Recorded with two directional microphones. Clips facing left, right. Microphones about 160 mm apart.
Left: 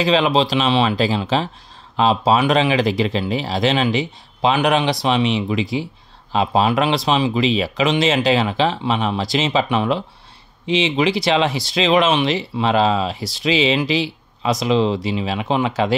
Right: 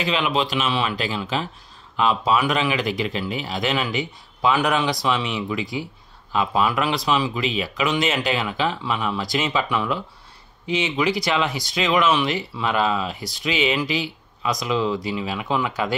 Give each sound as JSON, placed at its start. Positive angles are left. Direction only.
{"t": 0.0, "sound": "speech", "side_deg": 35}